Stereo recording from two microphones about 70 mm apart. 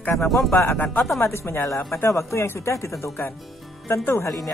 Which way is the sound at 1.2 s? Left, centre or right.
Left.